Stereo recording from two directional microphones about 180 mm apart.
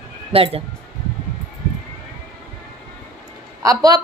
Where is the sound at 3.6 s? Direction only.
20° right (ahead or behind).